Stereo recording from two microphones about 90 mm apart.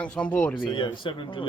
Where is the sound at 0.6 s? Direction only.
65° left (ahead or behind).